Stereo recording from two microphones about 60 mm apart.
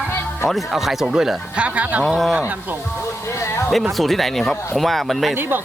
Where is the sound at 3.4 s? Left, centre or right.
Left.